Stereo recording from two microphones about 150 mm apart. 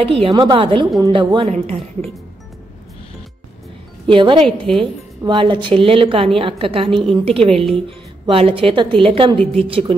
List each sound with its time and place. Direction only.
0.0 s a woman's voice: 40° right (ahead or behind)
0.3 s a woman's voice: 25° right (ahead or behind)
0.6 s a woman's voice: 35° right (ahead or behind)
1.5 s a woman's voice: 45° right (ahead or behind)
4.1 s a woman's voice: 35° right (ahead or behind)